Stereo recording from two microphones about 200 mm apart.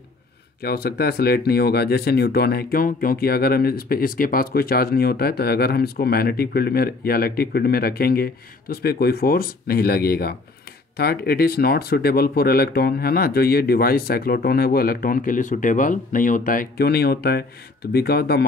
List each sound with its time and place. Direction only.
0.6 s speech: 50° left (ahead or behind)